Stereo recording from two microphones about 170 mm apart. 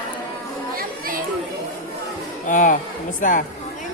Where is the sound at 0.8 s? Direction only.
55° right (ahead or behind).